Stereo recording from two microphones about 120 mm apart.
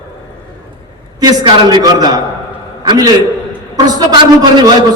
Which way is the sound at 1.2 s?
35° right (ahead or behind).